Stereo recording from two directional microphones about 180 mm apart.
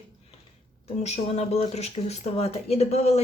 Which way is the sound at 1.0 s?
35° left (ahead or behind).